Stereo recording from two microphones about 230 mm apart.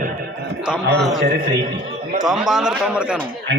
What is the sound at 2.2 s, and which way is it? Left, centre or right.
Speech, centre.